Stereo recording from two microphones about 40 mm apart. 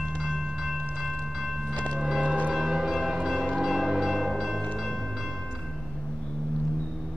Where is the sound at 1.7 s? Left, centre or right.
Left.